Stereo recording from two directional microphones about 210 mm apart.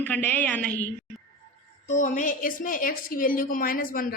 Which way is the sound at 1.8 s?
35° left (ahead or behind).